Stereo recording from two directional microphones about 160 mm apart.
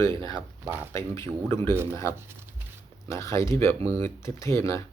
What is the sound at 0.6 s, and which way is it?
Speech, 10° right (ahead or behind).